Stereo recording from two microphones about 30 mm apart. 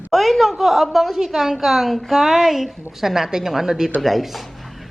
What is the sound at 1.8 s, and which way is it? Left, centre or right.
Speech, centre.